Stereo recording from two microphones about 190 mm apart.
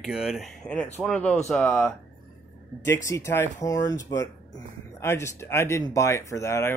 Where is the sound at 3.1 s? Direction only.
15° left (ahead or behind).